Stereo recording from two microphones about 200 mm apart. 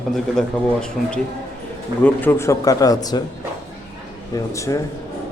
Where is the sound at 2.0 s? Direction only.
10° left (ahead or behind).